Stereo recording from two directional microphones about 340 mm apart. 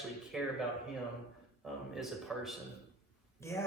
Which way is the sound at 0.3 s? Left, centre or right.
Centre.